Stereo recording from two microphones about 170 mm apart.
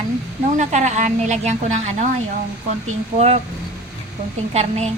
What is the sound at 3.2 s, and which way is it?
Speech, 40° right (ahead or behind).